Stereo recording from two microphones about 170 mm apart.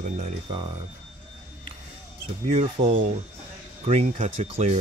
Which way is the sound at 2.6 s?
35° right (ahead or behind).